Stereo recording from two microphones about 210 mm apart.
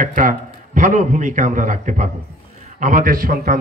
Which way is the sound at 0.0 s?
40° right (ahead or behind).